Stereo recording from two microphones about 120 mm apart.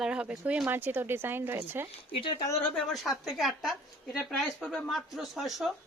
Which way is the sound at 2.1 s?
45° left (ahead or behind).